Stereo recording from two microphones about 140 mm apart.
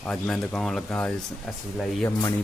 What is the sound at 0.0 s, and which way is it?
Speech, 10° left (ahead or behind).